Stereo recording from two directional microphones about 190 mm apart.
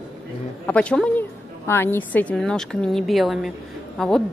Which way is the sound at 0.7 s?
5° left (ahead or behind).